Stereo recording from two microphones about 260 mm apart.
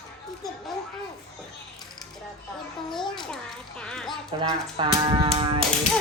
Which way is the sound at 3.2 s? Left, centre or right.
Centre.